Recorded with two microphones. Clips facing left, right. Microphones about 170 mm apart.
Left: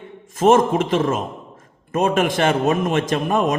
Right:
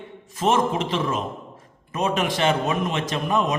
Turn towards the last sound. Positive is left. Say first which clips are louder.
# left 4 dB
turn(degrees=50)  # may be behind; listen again after turning